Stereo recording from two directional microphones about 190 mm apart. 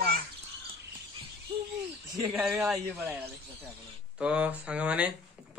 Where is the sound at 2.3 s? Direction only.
5° right (ahead or behind).